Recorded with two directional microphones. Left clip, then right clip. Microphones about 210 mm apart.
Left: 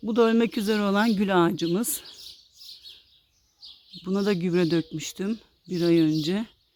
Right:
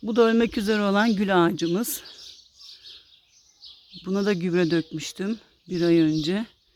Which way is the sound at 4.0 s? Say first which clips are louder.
Right 1 dB; 5° left (ahead or behind).